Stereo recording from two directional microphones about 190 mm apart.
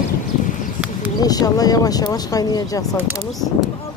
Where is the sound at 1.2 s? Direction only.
20° left (ahead or behind).